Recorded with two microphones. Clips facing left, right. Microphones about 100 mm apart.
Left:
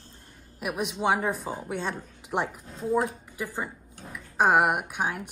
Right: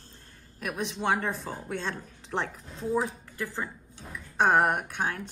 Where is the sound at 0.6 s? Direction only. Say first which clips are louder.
Left 3 dB; 15° left (ahead or behind).